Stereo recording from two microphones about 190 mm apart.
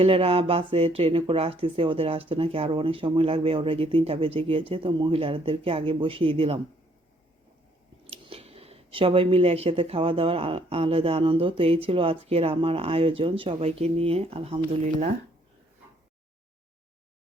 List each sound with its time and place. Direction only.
0.0 s speech: 30° right (ahead or behind)
8.1 s speech: 30° right (ahead or behind)